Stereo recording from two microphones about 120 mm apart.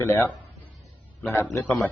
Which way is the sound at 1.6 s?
5° left (ahead or behind).